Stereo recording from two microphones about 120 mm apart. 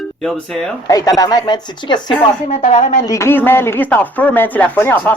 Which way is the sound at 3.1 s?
20° left (ahead or behind).